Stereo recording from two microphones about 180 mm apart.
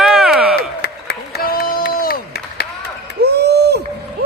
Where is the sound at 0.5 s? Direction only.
65° left (ahead or behind).